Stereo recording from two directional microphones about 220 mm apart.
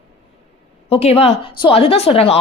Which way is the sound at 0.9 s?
25° left (ahead or behind).